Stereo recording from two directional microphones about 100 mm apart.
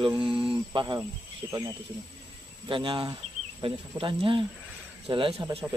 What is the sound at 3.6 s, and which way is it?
Speech, 65° right (ahead or behind).